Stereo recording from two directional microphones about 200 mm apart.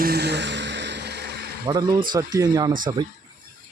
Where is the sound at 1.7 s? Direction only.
20° right (ahead or behind).